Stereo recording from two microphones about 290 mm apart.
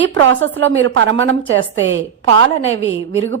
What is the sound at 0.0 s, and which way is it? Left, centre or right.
A woman's voice, right.